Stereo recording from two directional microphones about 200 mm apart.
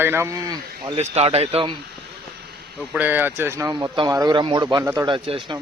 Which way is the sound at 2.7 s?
5° right (ahead or behind).